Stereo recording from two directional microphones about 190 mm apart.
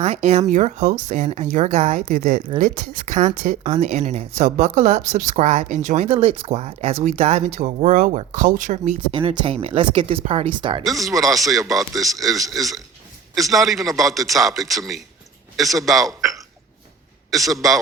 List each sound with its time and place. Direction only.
0.0 s speech: 35° right (ahead or behind)
9.1 s speech: 25° right (ahead or behind)
10.8 s a man's voice: centre (ahead or behind)
17.3 s a man's voice: centre (ahead or behind)